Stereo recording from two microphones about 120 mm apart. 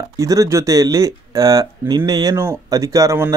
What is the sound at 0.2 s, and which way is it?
Speech, 30° right (ahead or behind).